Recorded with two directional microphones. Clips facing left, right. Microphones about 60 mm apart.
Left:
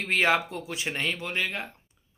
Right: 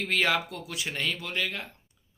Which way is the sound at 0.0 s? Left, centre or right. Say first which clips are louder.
Left 2 dB; left.